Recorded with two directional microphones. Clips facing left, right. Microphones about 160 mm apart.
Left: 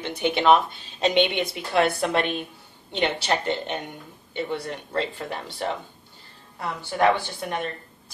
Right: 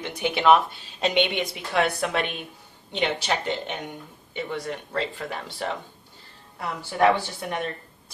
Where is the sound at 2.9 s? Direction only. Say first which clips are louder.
Left 1 dB; 10° right (ahead or behind).